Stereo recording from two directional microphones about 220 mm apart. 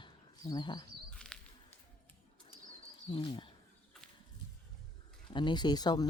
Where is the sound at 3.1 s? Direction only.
20° left (ahead or behind).